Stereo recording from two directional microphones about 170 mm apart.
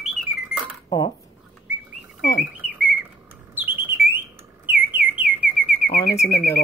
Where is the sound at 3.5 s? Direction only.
10° right (ahead or behind).